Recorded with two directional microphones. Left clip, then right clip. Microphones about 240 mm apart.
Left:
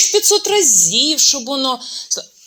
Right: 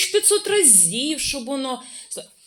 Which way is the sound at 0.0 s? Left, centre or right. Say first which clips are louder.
Left 6 dB; centre.